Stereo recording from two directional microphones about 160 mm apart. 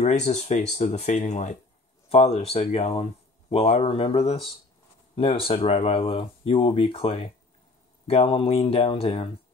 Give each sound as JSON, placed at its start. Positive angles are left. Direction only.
{"t": 0.0, "sound": "speech", "side_deg": 45}